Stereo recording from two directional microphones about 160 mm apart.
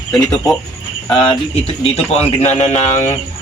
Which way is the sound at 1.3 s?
35° left (ahead or behind).